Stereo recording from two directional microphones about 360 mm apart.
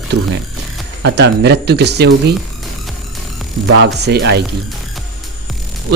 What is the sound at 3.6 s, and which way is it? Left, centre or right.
Speech, right.